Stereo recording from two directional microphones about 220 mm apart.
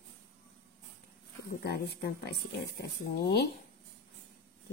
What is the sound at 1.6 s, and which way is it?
Speech, 45° left (ahead or behind).